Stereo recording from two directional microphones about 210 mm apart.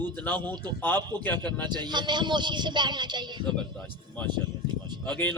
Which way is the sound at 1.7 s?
20° right (ahead or behind).